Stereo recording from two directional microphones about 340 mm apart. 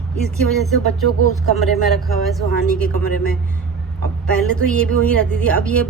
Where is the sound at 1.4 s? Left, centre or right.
Centre.